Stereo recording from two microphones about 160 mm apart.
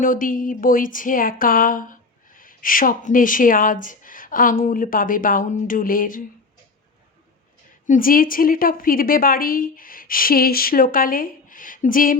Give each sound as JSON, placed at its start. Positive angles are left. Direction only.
{"t": 0.0, "sound": "speech", "side_deg": 55}
{"t": 7.9, "sound": "speech", "side_deg": 60}